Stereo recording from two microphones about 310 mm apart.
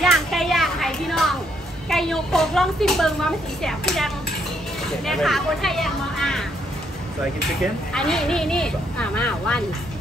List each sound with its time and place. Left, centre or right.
0.0 s children playing: centre
1.9 s speech: centre
7.9 s speech: centre